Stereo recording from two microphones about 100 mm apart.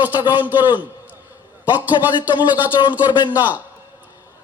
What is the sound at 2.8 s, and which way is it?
Speech, 50° left (ahead or behind).